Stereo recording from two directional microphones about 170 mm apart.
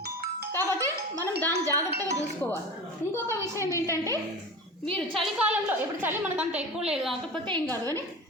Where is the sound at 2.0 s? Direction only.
20° right (ahead or behind).